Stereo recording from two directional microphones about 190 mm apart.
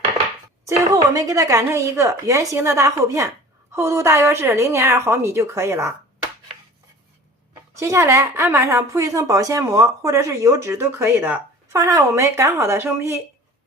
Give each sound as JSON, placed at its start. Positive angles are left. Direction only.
{"t": 0.6, "sound": "a woman's voice", "side_deg": -15}
{"t": 7.8, "sound": "a woman's voice", "side_deg": -15}